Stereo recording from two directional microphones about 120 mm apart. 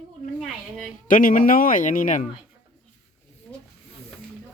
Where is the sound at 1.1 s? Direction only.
90° left.